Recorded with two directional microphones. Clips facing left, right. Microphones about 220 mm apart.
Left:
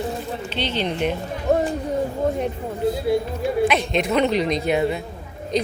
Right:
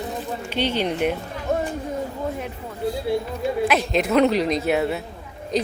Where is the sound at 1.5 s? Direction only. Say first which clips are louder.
Left 4 dB; 35° left (ahead or behind).